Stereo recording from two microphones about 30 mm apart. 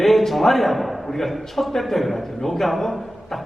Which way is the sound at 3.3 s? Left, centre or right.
Centre.